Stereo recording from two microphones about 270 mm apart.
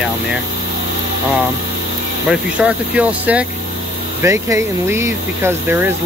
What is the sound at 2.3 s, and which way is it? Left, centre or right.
Speech, centre.